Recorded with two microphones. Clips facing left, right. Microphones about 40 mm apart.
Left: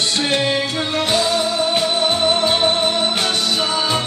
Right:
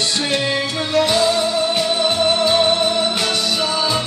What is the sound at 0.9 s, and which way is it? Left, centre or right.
Music, left.